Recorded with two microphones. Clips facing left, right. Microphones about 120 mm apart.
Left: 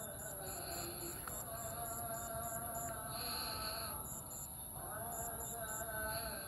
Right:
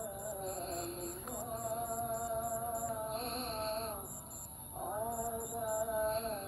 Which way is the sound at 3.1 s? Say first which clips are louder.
Right 8 dB; 50° right (ahead or behind).